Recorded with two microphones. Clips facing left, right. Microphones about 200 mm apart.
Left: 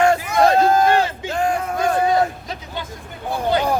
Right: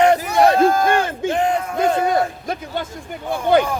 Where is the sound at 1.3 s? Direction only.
20° right (ahead or behind).